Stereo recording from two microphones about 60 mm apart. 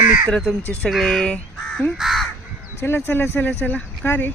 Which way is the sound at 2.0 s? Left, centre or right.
Centre.